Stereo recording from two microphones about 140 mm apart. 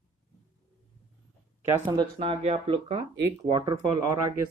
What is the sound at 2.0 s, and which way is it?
Speech, 45° right (ahead or behind).